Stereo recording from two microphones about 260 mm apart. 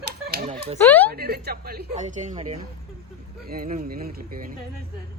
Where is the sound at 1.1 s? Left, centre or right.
Right.